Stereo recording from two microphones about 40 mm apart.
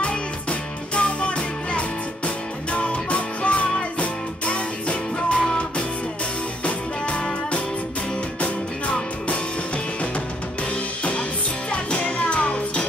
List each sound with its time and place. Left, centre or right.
0.0 s music: left
11.7 s music: left